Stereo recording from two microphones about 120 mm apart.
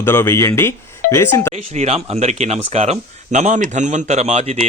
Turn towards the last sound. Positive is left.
turn(degrees=-65)  # may be behind; listen again after turning